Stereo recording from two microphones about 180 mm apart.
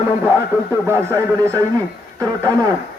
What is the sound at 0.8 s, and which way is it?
Speech, 15° right (ahead or behind).